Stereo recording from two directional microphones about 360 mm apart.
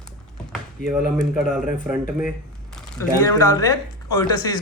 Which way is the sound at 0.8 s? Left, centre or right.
Centre.